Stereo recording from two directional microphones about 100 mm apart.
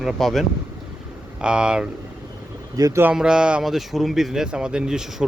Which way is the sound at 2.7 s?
35° right (ahead or behind).